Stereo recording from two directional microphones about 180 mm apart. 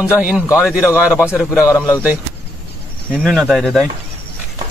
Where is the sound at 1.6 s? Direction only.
15° left (ahead or behind).